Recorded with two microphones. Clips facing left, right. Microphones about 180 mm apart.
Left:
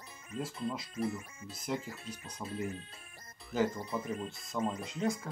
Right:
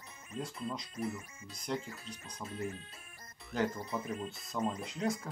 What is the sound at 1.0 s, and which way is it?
Speech, 30° left (ahead or behind).